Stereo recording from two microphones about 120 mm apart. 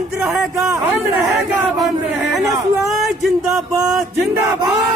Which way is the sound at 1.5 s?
20° right (ahead or behind).